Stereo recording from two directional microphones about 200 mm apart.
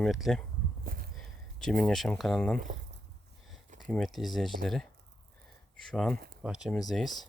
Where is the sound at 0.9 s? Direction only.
45° right (ahead or behind).